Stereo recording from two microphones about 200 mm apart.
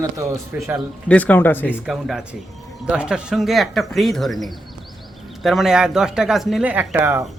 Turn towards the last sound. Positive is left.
turn(degrees=-10)  # may be behind; listen again after turning